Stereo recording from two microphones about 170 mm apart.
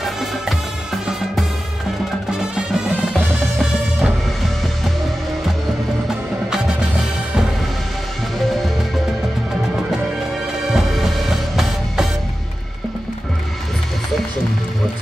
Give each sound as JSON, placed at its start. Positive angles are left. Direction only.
{"t": 0.0, "sound": "music", "side_deg": 0}
{"t": 2.5, "sound": "music", "side_deg": -5}
{"t": 8.4, "sound": "music", "side_deg": 0}
{"t": 10.7, "sound": "music", "side_deg": 0}